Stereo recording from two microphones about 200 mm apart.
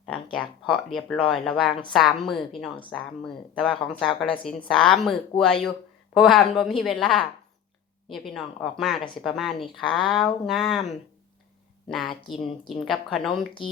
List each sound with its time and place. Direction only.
0.0 s speech: 5° left (ahead or behind)
6.1 s speech: centre (ahead or behind)
11.9 s speech: centre (ahead or behind)